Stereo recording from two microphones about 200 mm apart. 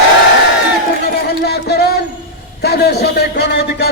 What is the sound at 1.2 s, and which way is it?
Music, 55° left (ahead or behind).